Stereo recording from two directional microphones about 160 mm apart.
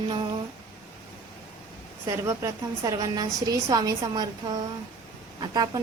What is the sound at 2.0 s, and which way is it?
A woman's voice, 20° right (ahead or behind).